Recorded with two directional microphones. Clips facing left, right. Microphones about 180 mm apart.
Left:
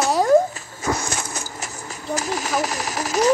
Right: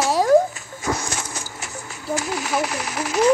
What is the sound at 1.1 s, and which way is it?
Horse, 40° left (ahead or behind).